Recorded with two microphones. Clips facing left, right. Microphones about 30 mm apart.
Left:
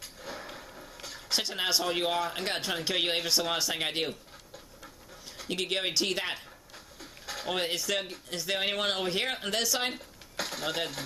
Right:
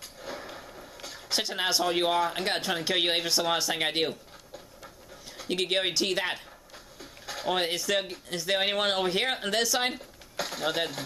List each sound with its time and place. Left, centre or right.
0.2 s speech: centre
5.4 s speech: centre